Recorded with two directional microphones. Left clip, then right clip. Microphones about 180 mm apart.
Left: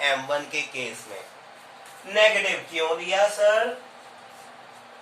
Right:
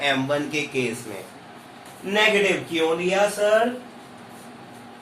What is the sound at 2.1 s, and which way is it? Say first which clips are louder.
Speech: right 1 dB; 60° right (ahead or behind).